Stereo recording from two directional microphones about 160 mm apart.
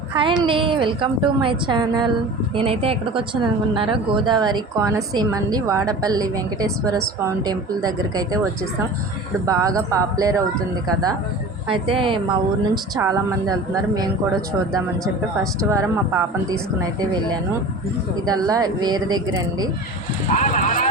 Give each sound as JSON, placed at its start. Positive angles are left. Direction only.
{"t": 0.1, "sound": "a woman's voice", "side_deg": -30}
{"t": 9.5, "sound": "a woman's voice", "side_deg": -20}
{"t": 11.7, "sound": "a woman's voice", "side_deg": -35}
{"t": 15.7, "sound": "a woman's voice", "side_deg": -20}
{"t": 18.3, "sound": "a woman's voice", "side_deg": -25}
{"t": 20.3, "sound": "speech", "side_deg": 50}